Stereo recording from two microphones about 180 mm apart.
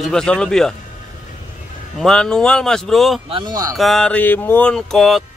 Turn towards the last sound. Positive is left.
turn(degrees=0)  # may be behind; listen again after turning